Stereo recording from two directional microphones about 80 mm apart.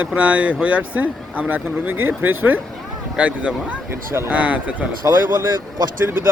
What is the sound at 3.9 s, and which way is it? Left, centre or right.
Speech, right.